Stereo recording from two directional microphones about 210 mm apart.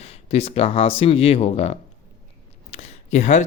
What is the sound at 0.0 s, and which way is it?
Speech, 30° left (ahead or behind).